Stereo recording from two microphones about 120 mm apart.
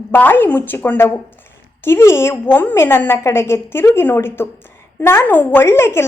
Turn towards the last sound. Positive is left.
turn(degrees=20)  # may be behind; listen again after turning